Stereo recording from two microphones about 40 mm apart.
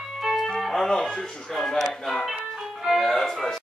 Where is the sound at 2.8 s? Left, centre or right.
Centre.